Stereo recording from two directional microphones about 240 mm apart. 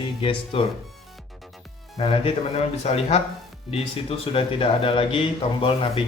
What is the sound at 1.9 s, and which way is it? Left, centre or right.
Speech, left.